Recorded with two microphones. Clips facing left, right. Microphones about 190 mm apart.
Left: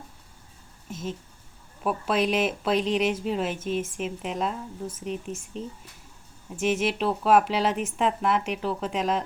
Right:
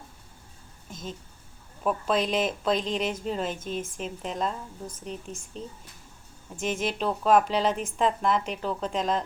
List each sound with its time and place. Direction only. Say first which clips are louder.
0.9 s speech: left 5 dB; 5° left (ahead or behind)
5.5 s speech: left 3 dB; 35° right (ahead or behind)
6.6 s speech: left 4 dB; 5° left (ahead or behind)